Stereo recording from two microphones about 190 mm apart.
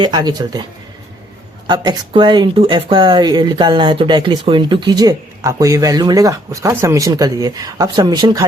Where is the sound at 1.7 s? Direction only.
25° right (ahead or behind).